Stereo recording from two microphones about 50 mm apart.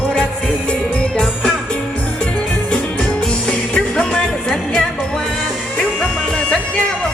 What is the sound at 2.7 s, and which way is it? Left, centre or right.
Music, centre.